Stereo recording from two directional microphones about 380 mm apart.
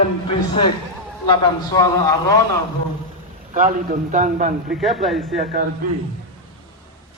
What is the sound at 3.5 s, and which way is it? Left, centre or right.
A man's voice, right.